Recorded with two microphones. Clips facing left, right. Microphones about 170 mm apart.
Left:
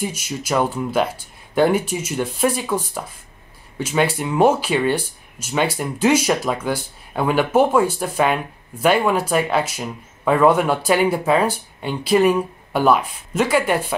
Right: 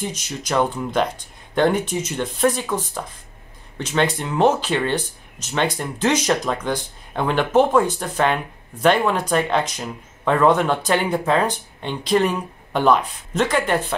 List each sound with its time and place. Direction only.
0.0 s speech: 10° left (ahead or behind)